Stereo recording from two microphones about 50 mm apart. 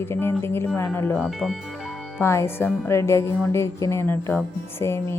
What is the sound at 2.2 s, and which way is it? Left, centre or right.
Speech, left.